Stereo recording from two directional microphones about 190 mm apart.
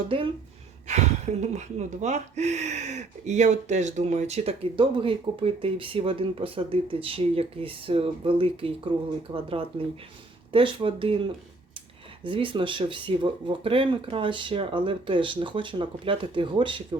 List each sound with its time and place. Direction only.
0.9 s speech: 35° right (ahead or behind)